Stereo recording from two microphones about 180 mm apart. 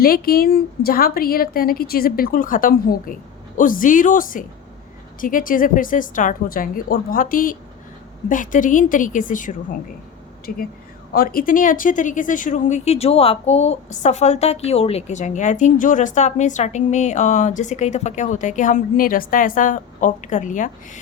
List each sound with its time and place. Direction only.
0.0 s a woman's voice: 55° left (ahead or behind)